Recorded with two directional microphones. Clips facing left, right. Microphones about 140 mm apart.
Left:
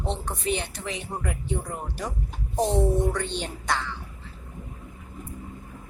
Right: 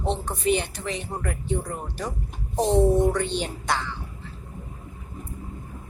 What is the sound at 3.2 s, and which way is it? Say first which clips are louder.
Speech: right 4 dB; 5° right (ahead or behind).